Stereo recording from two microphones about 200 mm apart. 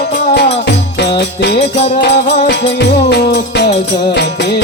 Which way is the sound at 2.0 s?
55° left (ahead or behind).